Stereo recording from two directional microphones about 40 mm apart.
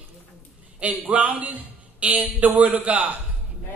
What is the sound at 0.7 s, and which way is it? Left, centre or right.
Speech, right.